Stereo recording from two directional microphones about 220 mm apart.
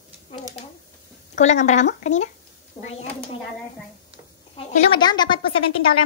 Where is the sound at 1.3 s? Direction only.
30° left (ahead or behind).